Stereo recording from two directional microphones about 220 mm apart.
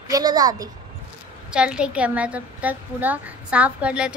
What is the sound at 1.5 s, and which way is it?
A woman's voice, 5° right (ahead or behind).